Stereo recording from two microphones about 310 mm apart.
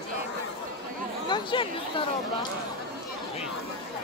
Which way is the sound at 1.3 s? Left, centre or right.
Centre.